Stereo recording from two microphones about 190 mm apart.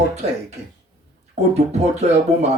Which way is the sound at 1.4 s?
35° right (ahead or behind).